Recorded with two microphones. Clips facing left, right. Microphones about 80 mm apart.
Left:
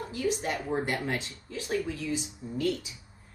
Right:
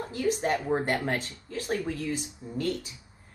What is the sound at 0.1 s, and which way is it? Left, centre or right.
Speech, right.